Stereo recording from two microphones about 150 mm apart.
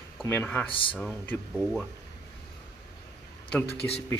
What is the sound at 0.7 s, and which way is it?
Speech, 35° left (ahead or behind).